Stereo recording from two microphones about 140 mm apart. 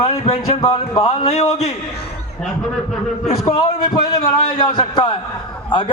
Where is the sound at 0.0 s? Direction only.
50° left (ahead or behind).